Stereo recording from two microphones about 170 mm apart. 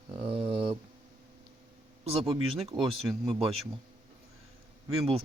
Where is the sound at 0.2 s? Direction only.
35° right (ahead or behind).